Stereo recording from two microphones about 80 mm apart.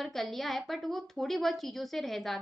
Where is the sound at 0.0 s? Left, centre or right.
Centre.